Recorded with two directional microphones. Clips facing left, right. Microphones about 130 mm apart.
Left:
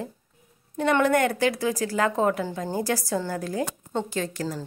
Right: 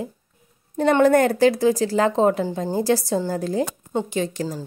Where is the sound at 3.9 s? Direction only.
20° right (ahead or behind).